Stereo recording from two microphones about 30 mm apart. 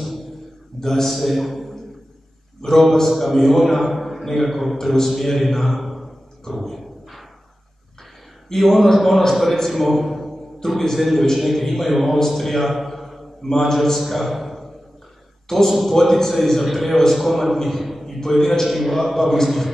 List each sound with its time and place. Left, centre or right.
0.0 s a sound: centre
0.7 s a man's voice: centre
1.1 s a man's voice: centre
3.1 s a man's voice: centre
6.4 s a sound: centre
8.5 s a man's voice: centre
12.3 s a sound: centre
13.4 s a man's voice: centre
13.9 s a man's voice: centre